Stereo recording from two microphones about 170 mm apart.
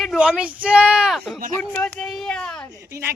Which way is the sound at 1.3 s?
55° right (ahead or behind).